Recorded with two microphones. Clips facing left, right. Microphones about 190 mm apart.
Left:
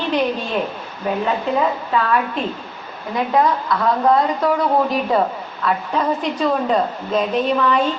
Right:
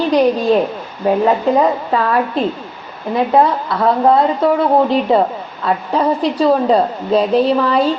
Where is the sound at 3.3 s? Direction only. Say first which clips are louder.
Right 2 dB; 30° right (ahead or behind).